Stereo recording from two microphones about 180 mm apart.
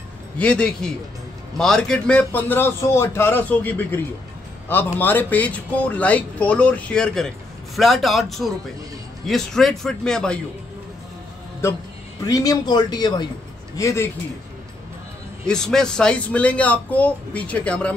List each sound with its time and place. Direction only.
0.4 s a man's voice: 5° left (ahead or behind)
11.6 s speech: 15° left (ahead or behind)
15.4 s speech: 5° left (ahead or behind)